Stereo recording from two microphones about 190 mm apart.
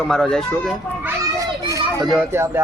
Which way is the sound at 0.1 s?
Centre (ahead or behind).